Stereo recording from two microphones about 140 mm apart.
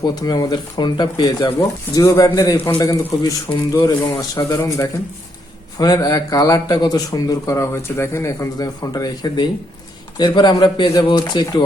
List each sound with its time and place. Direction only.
0.0 s a man's voice: 30° left (ahead or behind)
4.4 s a man's voice: 20° left (ahead or behind)